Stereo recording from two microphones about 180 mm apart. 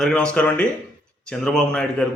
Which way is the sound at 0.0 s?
5° left (ahead or behind).